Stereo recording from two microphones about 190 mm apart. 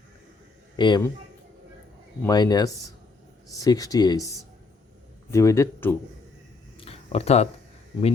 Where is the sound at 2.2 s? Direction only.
20° left (ahead or behind).